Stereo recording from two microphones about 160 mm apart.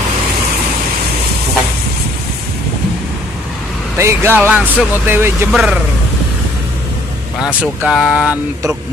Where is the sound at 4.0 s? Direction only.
15° right (ahead or behind).